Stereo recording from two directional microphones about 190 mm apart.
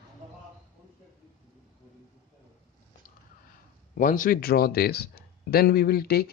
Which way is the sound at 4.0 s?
45° left (ahead or behind).